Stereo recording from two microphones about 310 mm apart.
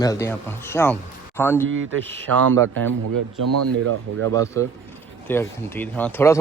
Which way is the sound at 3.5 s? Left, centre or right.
Right.